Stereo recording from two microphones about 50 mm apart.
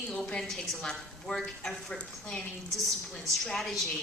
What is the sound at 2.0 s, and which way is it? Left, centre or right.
Stir, centre.